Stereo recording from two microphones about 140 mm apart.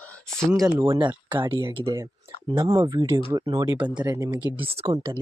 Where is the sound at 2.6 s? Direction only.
25° right (ahead or behind).